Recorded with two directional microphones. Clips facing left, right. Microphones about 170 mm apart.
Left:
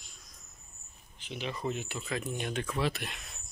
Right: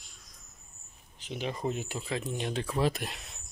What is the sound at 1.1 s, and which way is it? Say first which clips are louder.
Speech: right 3 dB; 40° right (ahead or behind).